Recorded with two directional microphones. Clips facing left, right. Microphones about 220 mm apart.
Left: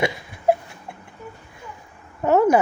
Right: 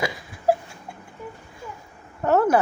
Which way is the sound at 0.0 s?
25° left (ahead or behind).